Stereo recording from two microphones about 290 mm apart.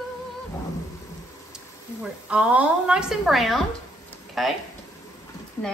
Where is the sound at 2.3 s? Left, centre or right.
Centre.